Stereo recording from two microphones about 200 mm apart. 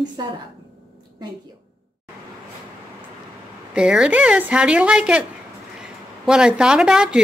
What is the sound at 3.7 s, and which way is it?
A woman's voice, 5° right (ahead or behind).